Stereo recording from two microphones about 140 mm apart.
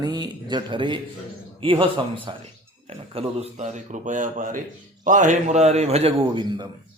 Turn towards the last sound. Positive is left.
turn(degrees=-30)  # may be behind; listen again after turning